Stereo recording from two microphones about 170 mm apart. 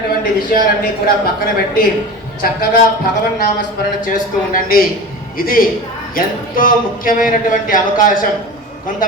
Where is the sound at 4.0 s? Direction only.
55° left (ahead or behind).